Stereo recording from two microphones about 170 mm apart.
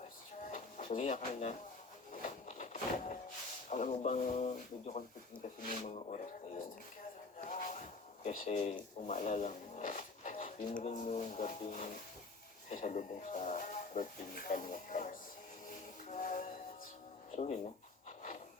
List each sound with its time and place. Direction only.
0.8 s speech: 45° left (ahead or behind)
2.2 s a sound: 50° left (ahead or behind)
3.7 s speech: 45° left (ahead or behind)
7.3 s a sound: 50° left (ahead or behind)
9.0 s speech: 45° left (ahead or behind)
16.0 s music: 45° left (ahead or behind)
17.3 s speech: 40° left (ahead or behind)